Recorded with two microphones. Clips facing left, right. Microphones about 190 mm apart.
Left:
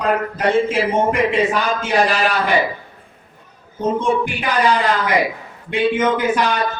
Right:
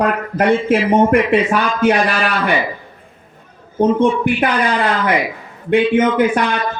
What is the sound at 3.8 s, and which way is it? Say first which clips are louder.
Speech: right 5 dB; 60° right (ahead or behind).